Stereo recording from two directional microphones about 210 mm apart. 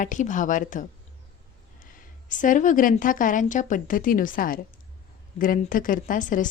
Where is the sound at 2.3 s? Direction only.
35° left (ahead or behind).